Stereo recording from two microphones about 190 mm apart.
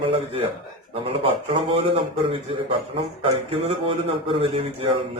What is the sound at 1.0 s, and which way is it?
A man's voice, 30° right (ahead or behind).